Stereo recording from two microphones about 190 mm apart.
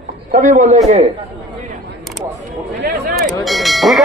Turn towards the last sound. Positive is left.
turn(degrees=0)  # may be behind; listen again after turning